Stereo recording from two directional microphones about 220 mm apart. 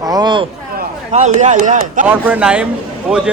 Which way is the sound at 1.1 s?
30° right (ahead or behind).